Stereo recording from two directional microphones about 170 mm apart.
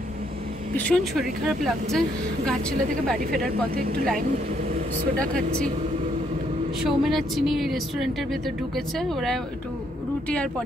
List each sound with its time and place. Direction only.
0.7 s a woman's voice: 5° left (ahead or behind)
3.3 s speech: 60° right (ahead or behind)
5.2 s a woman's voice: 5° left (ahead or behind)
6.8 s a woman's voice: centre (ahead or behind)